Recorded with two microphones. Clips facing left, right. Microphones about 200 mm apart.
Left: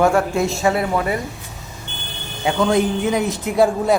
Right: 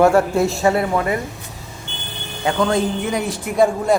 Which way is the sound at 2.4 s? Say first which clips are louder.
Left 1 dB; 10° left (ahead or behind).